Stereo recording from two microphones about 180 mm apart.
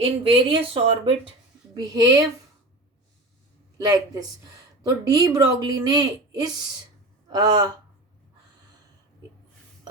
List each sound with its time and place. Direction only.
0.3 s speech: 30° right (ahead or behind)
1.7 s speech: 20° right (ahead or behind)
3.8 s speech: 20° right (ahead or behind)